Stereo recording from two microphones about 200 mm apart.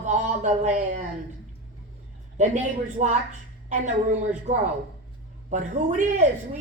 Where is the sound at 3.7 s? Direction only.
35° right (ahead or behind).